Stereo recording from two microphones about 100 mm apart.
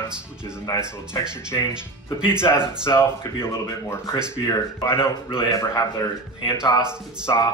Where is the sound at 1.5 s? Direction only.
45° left (ahead or behind).